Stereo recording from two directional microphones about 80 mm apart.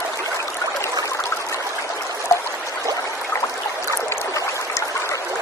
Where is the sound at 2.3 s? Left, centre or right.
Left.